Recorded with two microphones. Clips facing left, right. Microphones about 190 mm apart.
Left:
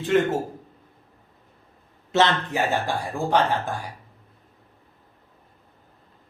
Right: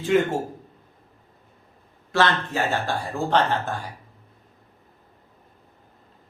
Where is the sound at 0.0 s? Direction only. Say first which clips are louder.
Even; centre (ahead or behind).